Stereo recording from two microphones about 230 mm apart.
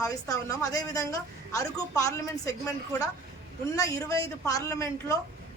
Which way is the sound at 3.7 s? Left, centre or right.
Centre.